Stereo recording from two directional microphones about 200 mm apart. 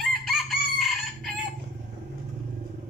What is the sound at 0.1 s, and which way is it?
Chicken, centre (ahead or behind).